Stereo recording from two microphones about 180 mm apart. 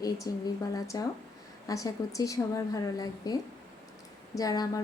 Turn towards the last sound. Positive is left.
turn(degrees=20)  # may be behind; listen again after turning